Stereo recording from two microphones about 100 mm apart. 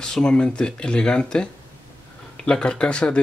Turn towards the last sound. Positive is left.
turn(degrees=10)  # may be behind; listen again after turning